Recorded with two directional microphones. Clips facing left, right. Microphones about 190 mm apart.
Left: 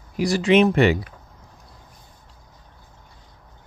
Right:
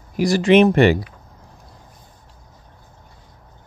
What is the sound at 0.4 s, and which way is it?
Speech, 55° right (ahead or behind).